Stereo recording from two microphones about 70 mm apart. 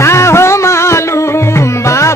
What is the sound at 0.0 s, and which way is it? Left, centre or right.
Music, left.